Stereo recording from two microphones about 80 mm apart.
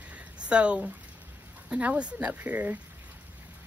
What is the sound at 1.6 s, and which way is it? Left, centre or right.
Speech, centre.